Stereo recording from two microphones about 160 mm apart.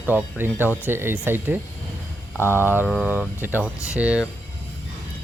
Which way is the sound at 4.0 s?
10° right (ahead or behind).